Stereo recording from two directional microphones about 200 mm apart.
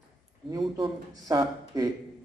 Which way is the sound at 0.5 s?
20° right (ahead or behind).